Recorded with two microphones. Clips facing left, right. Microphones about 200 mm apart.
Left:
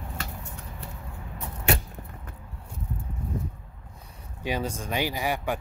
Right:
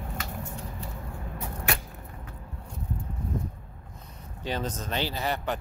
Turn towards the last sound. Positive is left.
turn(degrees=10)  # may be behind; listen again after turning